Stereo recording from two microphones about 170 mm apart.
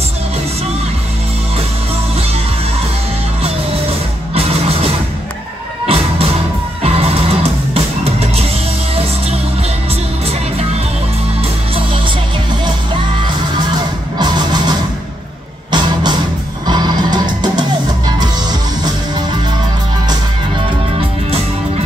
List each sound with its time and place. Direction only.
4.4 s music: 35° right (ahead or behind)
5.9 s music: 35° right (ahead or behind)
14.1 s music: 25° right (ahead or behind)